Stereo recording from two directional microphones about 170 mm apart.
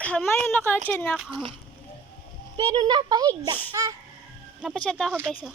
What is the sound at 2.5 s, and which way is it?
A child's voice, 25° right (ahead or behind).